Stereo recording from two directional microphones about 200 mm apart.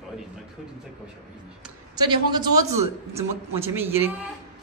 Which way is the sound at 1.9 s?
20° right (ahead or behind).